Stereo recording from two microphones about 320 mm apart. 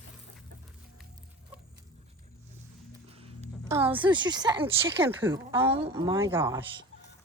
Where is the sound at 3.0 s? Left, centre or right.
Centre.